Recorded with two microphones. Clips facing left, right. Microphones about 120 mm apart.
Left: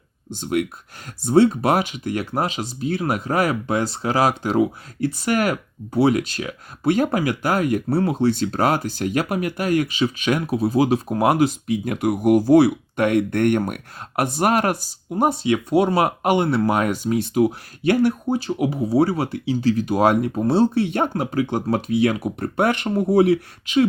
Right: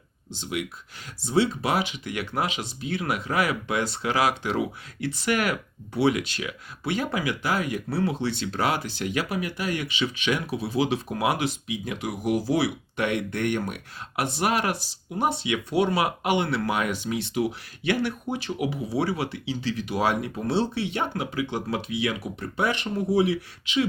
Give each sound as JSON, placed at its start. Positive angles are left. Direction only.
{"t": 0.3, "sound": "speech", "side_deg": 50}